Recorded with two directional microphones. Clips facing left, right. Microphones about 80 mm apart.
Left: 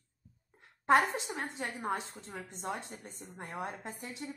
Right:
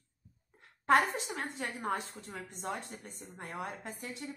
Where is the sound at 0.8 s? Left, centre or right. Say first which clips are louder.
Even; left.